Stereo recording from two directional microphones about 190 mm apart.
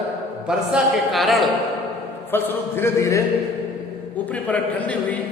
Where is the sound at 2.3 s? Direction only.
10° left (ahead or behind).